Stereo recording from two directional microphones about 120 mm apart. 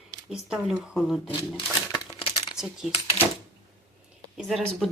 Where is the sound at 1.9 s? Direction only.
40° left (ahead or behind).